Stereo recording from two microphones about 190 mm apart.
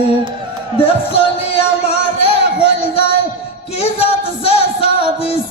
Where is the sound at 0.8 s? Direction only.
30° left (ahead or behind).